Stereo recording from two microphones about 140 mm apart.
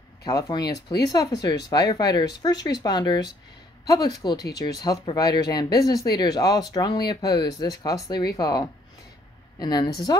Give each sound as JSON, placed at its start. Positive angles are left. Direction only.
{"t": 0.2, "sound": "a woman's voice", "side_deg": 25}